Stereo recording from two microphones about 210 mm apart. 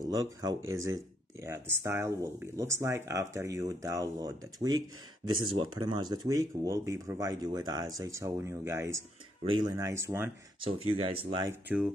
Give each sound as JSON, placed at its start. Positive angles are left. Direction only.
{"t": 0.0, "sound": "speech", "side_deg": -15}
{"t": 10.6, "sound": "speech", "side_deg": -30}
{"t": 11.4, "sound": "speech", "side_deg": -5}